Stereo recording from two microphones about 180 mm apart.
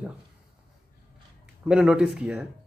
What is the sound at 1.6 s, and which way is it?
Speech, 5° right (ahead or behind).